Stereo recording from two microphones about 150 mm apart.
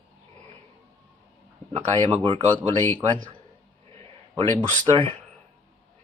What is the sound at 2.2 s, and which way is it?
Speech, 35° right (ahead or behind).